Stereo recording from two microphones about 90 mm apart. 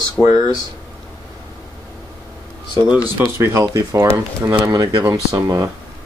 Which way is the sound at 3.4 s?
35° right (ahead or behind).